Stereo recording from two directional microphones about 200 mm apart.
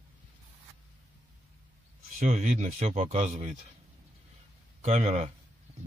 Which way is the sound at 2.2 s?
40° right (ahead or behind).